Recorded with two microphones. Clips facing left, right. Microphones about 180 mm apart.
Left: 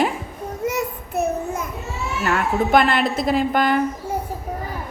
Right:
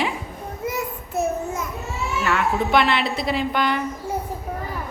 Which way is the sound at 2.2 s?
45° left (ahead or behind).